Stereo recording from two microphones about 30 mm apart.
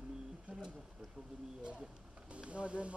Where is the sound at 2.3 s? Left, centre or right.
Right.